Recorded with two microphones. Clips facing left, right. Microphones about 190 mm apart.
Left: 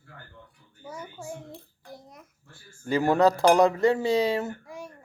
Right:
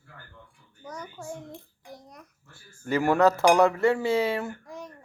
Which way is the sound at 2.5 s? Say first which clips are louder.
Even; 30° left (ahead or behind).